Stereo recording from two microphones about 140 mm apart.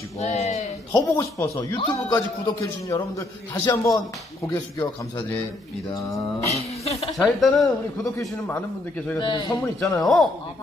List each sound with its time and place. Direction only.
0.2 s speech: 50° left (ahead or behind)
0.9 s speech: 20° left (ahead or behind)
1.8 s speech: 35° left (ahead or behind)
2.4 s speech: 25° left (ahead or behind)
6.5 s a sound: 50° left (ahead or behind)
7.2 s a woman's voice: centre (ahead or behind)
8.4 s a man's voice: 15° left (ahead or behind)
9.2 s speech: 35° left (ahead or behind)
10.0 s a woman's voice: centre (ahead or behind)